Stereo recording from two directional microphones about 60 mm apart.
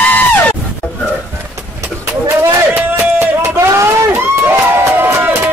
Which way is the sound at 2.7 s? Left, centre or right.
Right.